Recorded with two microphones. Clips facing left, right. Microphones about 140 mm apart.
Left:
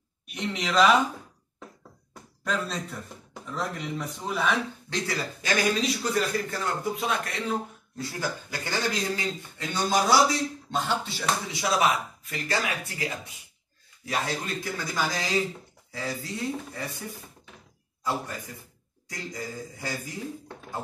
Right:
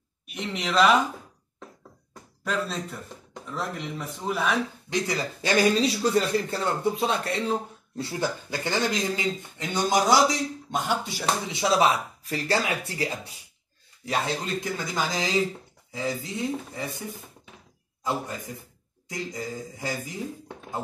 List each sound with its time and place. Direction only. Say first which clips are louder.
0.3 s speech: even; centre (ahead or behind)
2.4 s speech: right 1 dB; centre (ahead or behind)
4.8 s speech: right 3 dB; 20° right (ahead or behind)
5.6 s a man's voice: right 5 dB; 30° right (ahead or behind); by 11.2 s 15° right (ahead or behind)
11.8 s speech: right 2 dB; 30° right (ahead or behind)
14.0 s speech: right 2 dB; 20° right (ahead or behind)
18.0 s speech: right 1 dB; 20° right (ahead or behind)